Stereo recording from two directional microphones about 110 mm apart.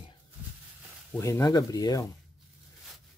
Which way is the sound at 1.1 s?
25° left (ahead or behind).